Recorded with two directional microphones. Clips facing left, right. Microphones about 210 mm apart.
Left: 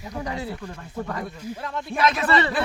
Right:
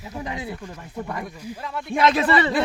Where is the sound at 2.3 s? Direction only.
10° right (ahead or behind).